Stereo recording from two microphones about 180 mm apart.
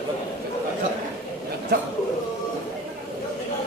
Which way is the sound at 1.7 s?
60° right (ahead or behind).